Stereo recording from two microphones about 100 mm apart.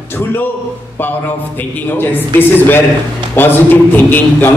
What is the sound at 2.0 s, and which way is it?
A man's voice, 20° left (ahead or behind).